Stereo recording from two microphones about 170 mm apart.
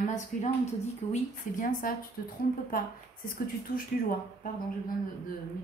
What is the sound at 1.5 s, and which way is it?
Speech, 50° left (ahead or behind).